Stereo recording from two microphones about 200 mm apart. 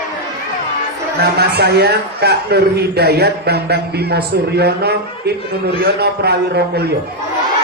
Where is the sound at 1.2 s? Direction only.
55° right (ahead or behind).